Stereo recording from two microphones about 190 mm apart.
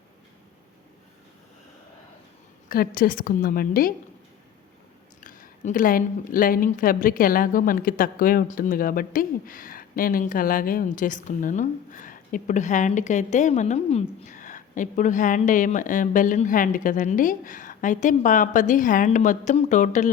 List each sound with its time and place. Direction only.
2.6 s a woman's voice: 50° left (ahead or behind)
5.2 s a woman's voice: 45° left (ahead or behind)